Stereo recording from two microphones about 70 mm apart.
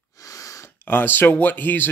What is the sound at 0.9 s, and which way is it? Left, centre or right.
Speech, left.